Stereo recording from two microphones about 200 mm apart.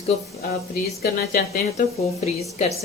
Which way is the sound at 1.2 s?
45° left (ahead or behind).